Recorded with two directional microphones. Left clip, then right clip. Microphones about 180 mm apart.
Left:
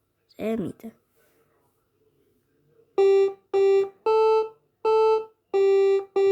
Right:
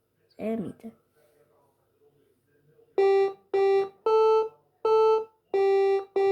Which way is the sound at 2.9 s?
35° left (ahead or behind).